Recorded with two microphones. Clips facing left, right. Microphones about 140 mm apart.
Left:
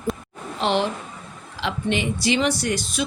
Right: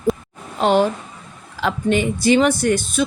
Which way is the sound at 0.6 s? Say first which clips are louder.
Right 6 dB; 45° right (ahead or behind).